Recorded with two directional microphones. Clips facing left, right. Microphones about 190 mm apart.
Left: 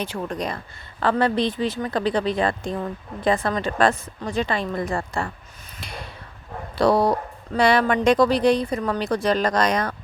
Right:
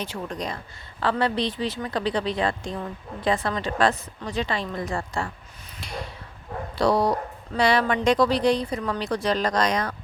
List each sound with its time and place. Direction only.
0.0 s speech: 55° left (ahead or behind)
6.7 s speech: 55° left (ahead or behind)